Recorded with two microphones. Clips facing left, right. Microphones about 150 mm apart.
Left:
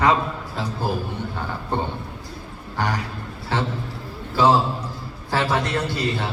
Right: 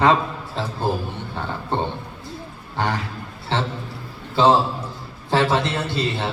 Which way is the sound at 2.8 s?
25° right (ahead or behind).